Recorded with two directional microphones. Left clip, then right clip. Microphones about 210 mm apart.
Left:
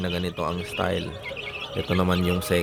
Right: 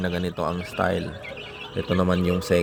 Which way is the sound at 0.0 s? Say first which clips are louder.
Right 1 dB; 5° right (ahead or behind).